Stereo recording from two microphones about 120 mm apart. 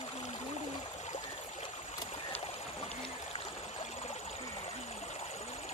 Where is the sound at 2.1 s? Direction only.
55° left (ahead or behind).